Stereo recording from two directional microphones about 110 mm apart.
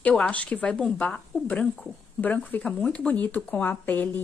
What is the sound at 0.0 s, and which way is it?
A woman's voice, 10° left (ahead or behind).